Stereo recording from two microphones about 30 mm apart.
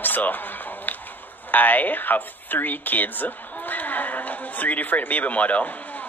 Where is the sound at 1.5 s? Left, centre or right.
Left.